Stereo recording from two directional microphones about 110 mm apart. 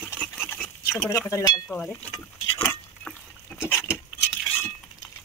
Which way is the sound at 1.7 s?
10° left (ahead or behind).